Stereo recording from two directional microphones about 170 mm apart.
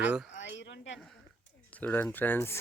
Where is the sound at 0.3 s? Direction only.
90° left.